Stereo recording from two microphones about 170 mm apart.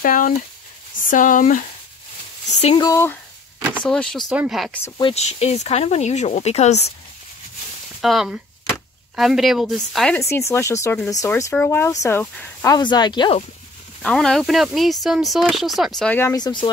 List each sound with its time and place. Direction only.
0.0 s speech: 55° left (ahead or behind)
2.5 s speech: 35° left (ahead or behind)
2.8 s speech: 15° left (ahead or behind)
3.8 s speech: 5° left (ahead or behind)
4.9 s speech: 35° left (ahead or behind)
8.0 s speech: centre (ahead or behind)
10.3 s speech: 15° left (ahead or behind)
12.7 s speech: 25° left (ahead or behind)
14.0 s speech: 5° left (ahead or behind); by 16.6 s 25° left (ahead or behind)